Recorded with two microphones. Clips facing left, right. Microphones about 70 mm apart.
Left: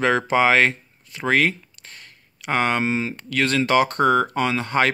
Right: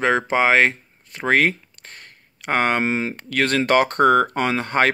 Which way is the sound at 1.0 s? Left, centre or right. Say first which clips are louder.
Right 2 dB; right.